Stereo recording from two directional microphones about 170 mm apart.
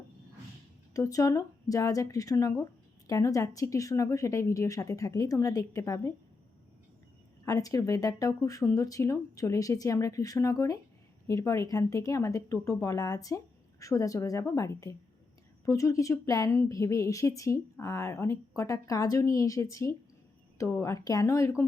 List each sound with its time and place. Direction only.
0.9 s a woman's voice: 20° left (ahead or behind)
7.4 s a woman's voice: 20° left (ahead or behind)